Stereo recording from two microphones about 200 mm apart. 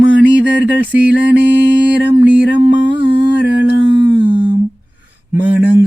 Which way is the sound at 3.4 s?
60° left (ahead or behind).